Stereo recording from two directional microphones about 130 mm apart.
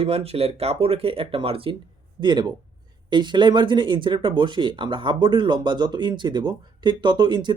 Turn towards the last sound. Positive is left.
turn(degrees=-35)  # may be behind; listen again after turning